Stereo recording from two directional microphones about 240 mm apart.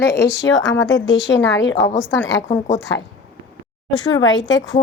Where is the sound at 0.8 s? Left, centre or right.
Centre.